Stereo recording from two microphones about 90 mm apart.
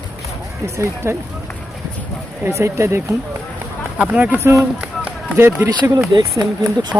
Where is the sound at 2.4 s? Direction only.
30° right (ahead or behind).